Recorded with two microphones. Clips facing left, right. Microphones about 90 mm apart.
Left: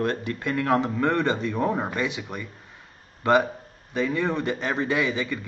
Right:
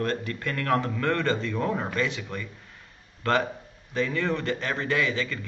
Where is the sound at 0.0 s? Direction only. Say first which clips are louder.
Left 2 dB; 20° left (ahead or behind).